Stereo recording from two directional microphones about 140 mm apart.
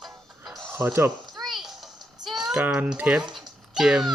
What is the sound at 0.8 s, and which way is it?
Speech, 15° right (ahead or behind).